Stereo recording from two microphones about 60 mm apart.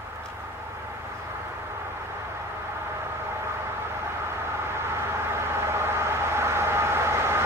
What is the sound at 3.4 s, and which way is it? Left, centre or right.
Vehicle, right.